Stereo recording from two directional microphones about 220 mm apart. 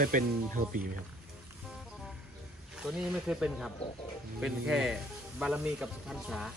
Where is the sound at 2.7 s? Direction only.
5° right (ahead or behind).